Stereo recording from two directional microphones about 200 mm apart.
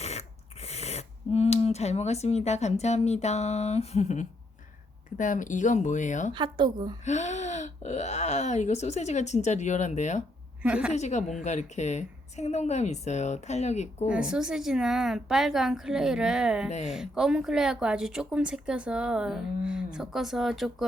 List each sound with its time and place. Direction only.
0.0 s speech: 30° left (ahead or behind)
6.3 s a woman's voice: 25° right (ahead or behind)
7.0 s speech: 35° left (ahead or behind)
10.6 s speech: 5° right (ahead or behind)
10.9 s speech: 35° left (ahead or behind)
14.1 s speech: 5° right (ahead or behind)